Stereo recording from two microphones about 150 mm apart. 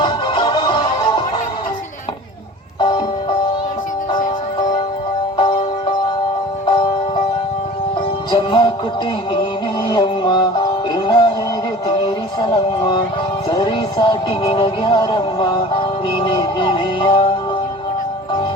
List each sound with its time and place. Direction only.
0.0 s music: 30° left (ahead or behind)
5.4 s music: 35° left (ahead or behind)
6.7 s music: 35° left (ahead or behind)
8.3 s music: 30° left (ahead or behind)
9.9 s music: 30° left (ahead or behind)